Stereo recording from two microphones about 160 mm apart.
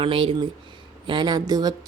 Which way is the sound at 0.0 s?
35° right (ahead or behind).